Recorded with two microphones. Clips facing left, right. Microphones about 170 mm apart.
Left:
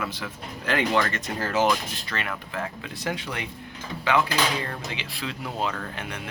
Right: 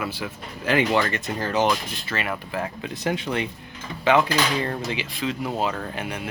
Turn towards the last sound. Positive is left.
turn(degrees=-10)  # may be behind; listen again after turning